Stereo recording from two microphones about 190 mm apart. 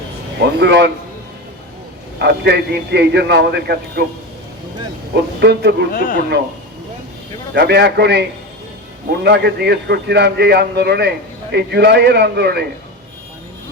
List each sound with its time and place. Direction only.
0.6 s a man's voice: 60° right (ahead or behind)
2.2 s a man's voice: 60° right (ahead or behind)
5.4 s a man's voice: 60° right (ahead or behind)
5.9 s speech: 45° left (ahead or behind)
7.5 s a man's voice: 60° right (ahead or behind)